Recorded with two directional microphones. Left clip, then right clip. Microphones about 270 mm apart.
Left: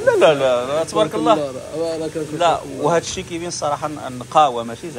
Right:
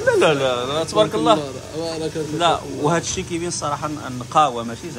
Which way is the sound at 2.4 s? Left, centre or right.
Centre.